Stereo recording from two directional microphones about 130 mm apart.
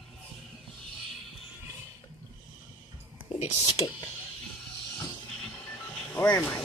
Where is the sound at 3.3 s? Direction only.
60° left (ahead or behind).